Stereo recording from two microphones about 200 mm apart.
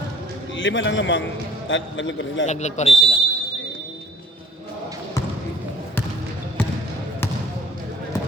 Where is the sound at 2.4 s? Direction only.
35° left (ahead or behind).